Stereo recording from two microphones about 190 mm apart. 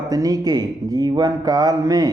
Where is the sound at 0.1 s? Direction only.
20° right (ahead or behind).